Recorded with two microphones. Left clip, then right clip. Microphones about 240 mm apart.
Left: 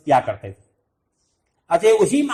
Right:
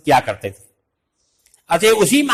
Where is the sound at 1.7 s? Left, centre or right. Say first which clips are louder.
Right 2 dB; right.